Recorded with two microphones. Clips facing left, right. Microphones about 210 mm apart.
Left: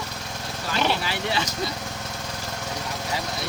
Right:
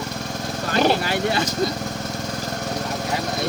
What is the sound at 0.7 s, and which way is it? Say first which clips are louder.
Speech: right 6 dB; 45° right (ahead or behind).